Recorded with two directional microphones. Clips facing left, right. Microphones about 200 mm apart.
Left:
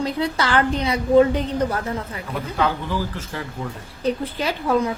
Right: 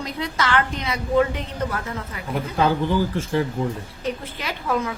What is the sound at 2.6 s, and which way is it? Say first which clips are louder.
Speech: right 3 dB; 30° right (ahead or behind).